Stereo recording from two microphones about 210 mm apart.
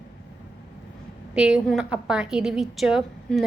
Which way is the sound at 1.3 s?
5° right (ahead or behind).